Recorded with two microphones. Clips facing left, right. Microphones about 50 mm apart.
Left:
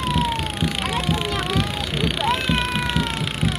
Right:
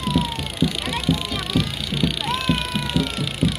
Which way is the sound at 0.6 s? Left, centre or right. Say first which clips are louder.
Right 5 dB; left.